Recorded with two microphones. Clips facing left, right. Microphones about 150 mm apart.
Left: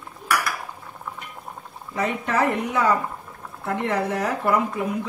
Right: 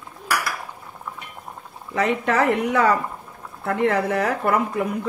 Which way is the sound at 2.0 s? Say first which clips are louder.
Right 3 dB; 70° right (ahead or behind).